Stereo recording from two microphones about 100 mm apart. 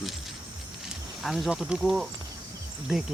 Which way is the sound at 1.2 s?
5° right (ahead or behind).